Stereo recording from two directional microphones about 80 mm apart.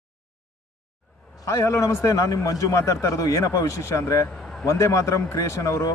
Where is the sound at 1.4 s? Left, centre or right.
Left.